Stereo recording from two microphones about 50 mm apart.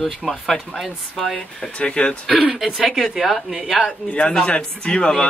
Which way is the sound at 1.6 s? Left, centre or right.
Left.